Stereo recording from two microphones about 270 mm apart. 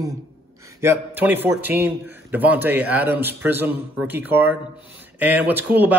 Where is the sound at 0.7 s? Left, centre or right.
Centre.